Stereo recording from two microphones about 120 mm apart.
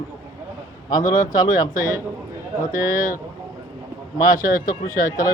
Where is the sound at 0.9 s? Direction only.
35° left (ahead or behind).